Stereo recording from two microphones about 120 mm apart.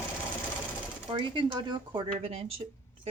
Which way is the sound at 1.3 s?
40° right (ahead or behind).